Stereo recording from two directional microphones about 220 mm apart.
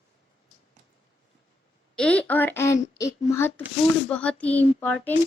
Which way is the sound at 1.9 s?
5° left (ahead or behind).